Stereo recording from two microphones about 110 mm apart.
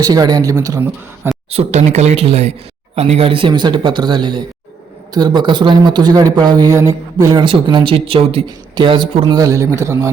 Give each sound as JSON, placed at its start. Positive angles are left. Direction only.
{"t": 0.0, "sound": "a man's voice", "side_deg": -35}
{"t": 1.5, "sound": "a man's voice", "side_deg": -80}
{"t": 7.4, "sound": "speech", "side_deg": -45}
{"t": 9.3, "sound": "a man's voice", "side_deg": -30}